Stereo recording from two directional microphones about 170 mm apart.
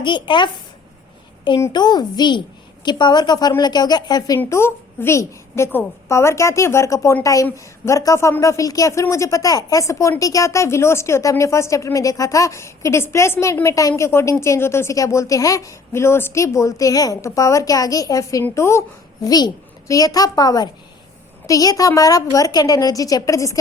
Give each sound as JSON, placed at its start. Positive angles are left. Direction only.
{"t": 0.0, "sound": "a woman's voice", "side_deg": 25}